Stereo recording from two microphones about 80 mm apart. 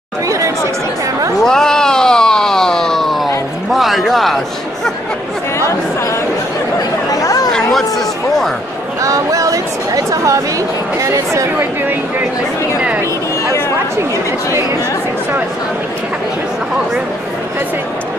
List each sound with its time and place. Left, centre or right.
1.4 s a sound: centre
7.1 s chatter: left
9.0 s speech: right